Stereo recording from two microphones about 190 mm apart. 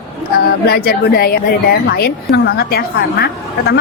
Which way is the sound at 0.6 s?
55° left (ahead or behind).